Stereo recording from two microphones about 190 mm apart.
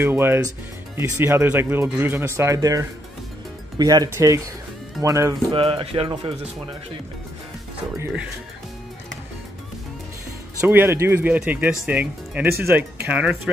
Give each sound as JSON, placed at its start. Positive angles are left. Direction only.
{"t": 0.0, "sound": "speech", "side_deg": -10}
{"t": 5.5, "sound": "speech", "side_deg": -30}
{"t": 10.6, "sound": "speech", "side_deg": -15}